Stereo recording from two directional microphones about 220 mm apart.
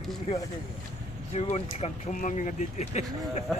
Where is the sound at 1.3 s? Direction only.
30° left (ahead or behind).